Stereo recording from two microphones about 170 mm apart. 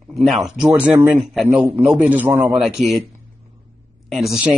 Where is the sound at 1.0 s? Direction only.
15° right (ahead or behind).